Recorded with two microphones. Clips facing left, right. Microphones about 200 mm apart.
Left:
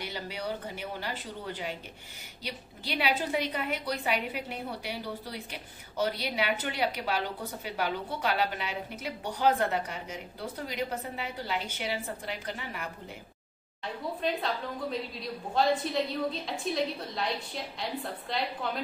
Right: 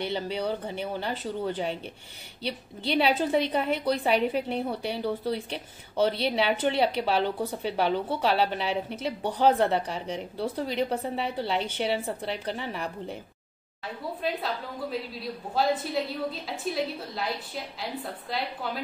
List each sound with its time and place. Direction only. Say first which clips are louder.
0.0 s a woman's voice: right 7 dB; 30° right (ahead or behind)
2.4 s a woman's voice: right 8 dB; 25° right (ahead or behind)
14.2 s a woman's voice: even; 5° right (ahead or behind)